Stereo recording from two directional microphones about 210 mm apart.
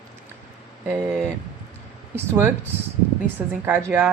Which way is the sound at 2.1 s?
10° right (ahead or behind).